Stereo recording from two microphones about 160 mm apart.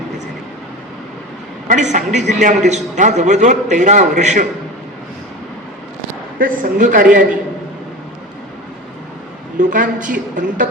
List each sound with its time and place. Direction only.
1.6 s a man's voice: 50° right (ahead or behind)
6.4 s speech: 55° right (ahead or behind)
9.6 s a man's voice: 50° right (ahead or behind)